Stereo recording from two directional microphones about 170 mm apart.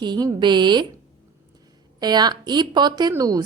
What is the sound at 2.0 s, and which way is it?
A woman's voice, 25° right (ahead or behind).